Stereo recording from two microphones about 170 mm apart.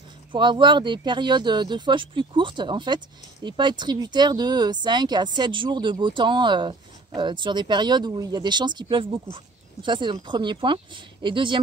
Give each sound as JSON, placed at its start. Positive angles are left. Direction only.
{"t": 0.3, "sound": "speech", "side_deg": -30}